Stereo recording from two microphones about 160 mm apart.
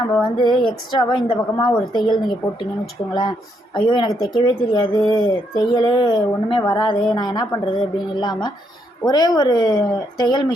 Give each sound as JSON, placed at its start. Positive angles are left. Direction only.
{"t": 0.3, "sound": "speech", "side_deg": 30}
{"t": 3.8, "sound": "speech", "side_deg": 30}